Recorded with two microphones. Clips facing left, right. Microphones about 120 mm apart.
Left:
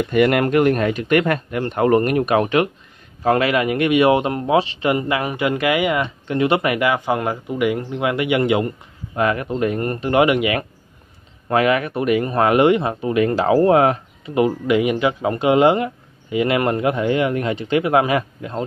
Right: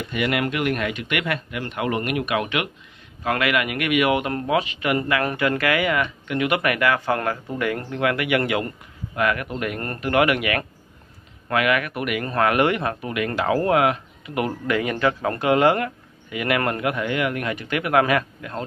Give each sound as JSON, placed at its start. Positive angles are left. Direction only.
{"t": 0.0, "sound": "speech", "side_deg": 45}